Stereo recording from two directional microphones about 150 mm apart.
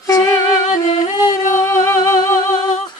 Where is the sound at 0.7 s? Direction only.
55° left (ahead or behind).